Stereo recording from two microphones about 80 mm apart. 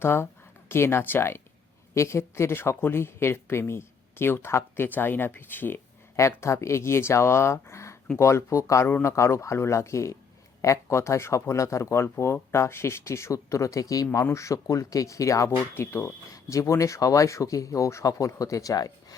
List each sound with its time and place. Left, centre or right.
0.0 s speech: left
6.1 s speech: left